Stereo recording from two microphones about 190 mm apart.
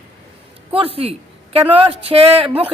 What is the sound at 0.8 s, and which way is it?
Speech, 30° right (ahead or behind).